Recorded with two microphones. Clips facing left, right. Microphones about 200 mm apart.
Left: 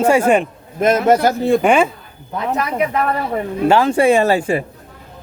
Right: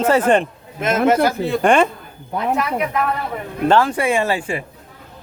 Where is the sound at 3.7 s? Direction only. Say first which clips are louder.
Left 1 dB; 15° left (ahead or behind).